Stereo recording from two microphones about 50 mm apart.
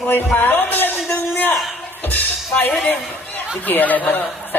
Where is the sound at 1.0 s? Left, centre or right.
Left.